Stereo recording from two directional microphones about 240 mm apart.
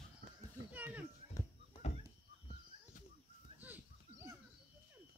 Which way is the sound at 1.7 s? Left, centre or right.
Left.